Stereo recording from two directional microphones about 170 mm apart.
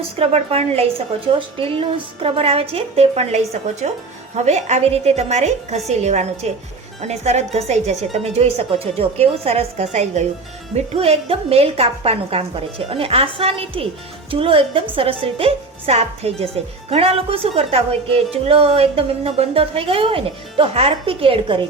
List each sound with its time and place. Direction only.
0.2 s a woman's voice: 35° right (ahead or behind)